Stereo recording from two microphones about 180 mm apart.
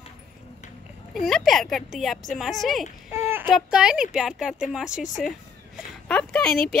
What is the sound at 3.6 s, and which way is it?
Speech, 5° right (ahead or behind).